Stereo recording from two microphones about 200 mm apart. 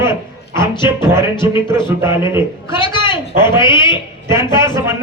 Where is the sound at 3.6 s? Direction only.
25° left (ahead or behind).